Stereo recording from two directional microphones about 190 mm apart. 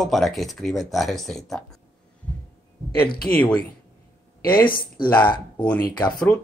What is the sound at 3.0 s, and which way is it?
Speech, 50° left (ahead or behind).